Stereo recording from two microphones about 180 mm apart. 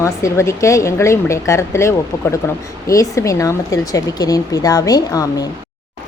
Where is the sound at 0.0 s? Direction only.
15° left (ahead or behind).